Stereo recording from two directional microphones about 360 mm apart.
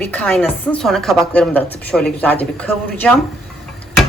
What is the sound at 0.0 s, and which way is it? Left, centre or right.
Speech, centre.